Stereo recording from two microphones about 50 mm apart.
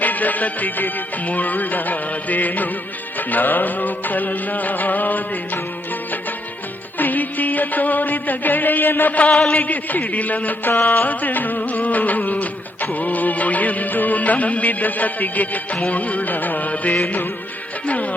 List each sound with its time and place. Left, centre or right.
0.0 s music: left
7.0 s music: left
9.3 s a man's voice: centre
9.6 s music: left
10.7 s music: left